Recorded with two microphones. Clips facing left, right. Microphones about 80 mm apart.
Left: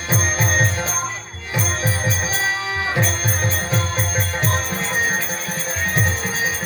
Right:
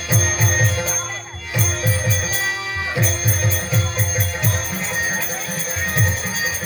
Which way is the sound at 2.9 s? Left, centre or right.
Left.